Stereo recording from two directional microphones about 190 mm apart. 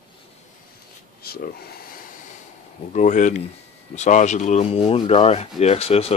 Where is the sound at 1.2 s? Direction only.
50° left (ahead or behind).